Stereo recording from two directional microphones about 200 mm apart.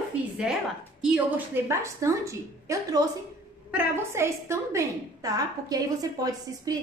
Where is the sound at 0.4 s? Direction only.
5° right (ahead or behind).